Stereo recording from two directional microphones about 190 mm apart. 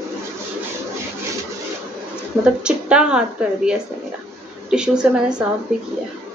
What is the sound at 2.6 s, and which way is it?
Speech, 5° right (ahead or behind).